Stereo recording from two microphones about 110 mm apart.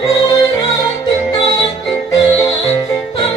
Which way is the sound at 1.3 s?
35° left (ahead or behind).